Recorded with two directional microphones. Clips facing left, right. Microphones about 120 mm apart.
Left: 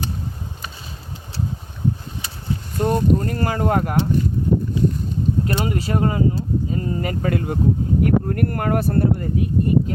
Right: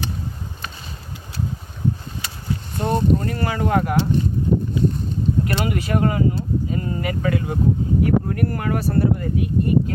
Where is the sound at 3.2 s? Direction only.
40° left (ahead or behind).